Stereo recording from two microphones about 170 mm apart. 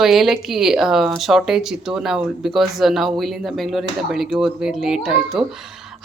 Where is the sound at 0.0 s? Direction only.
Centre (ahead or behind).